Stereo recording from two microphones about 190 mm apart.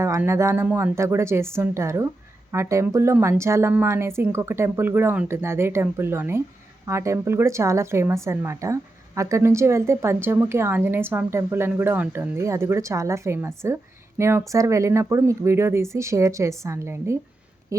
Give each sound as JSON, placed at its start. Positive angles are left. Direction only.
{"t": 0.0, "sound": "a woman's voice", "side_deg": -15}